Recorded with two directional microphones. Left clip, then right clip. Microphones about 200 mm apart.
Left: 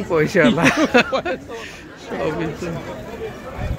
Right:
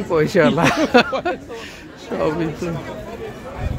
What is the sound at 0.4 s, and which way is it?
Speech, 15° right (ahead or behind).